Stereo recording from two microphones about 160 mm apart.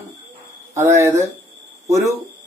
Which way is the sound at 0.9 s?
20° right (ahead or behind).